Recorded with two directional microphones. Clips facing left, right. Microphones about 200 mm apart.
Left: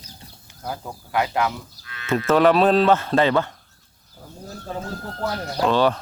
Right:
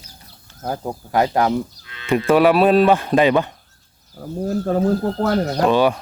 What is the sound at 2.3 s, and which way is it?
A man's voice, 10° right (ahead or behind).